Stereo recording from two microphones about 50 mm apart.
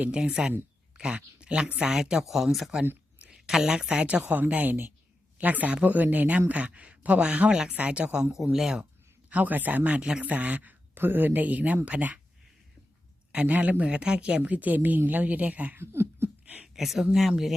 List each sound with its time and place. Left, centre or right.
0.1 s speech: centre
9.3 s speech: right
13.3 s speech: right
15.8 s a sound: right
16.7 s speech: centre